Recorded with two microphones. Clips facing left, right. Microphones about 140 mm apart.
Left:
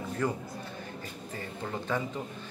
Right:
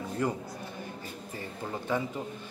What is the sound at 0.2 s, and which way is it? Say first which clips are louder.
Speech: even; 20° right (ahead or behind).